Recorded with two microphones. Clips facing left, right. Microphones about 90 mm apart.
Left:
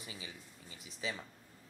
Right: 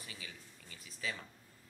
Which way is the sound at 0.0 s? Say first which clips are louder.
Left 2 dB; 20° left (ahead or behind).